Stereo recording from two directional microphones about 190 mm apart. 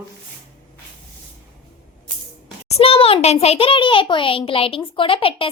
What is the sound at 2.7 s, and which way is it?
A child's voice, 30° left (ahead or behind).